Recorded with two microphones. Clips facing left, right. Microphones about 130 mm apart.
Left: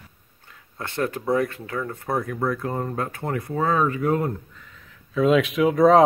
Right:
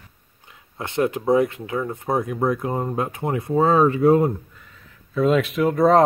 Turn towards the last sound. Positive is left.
turn(degrees=0)  # may be behind; listen again after turning